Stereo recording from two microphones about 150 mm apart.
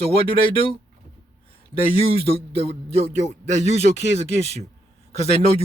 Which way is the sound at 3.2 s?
50° right (ahead or behind).